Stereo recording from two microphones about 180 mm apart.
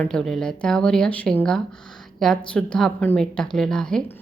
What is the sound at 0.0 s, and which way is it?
Speech, 5° left (ahead or behind).